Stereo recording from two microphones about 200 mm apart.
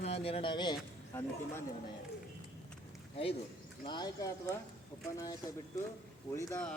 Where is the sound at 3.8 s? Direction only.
20° left (ahead or behind).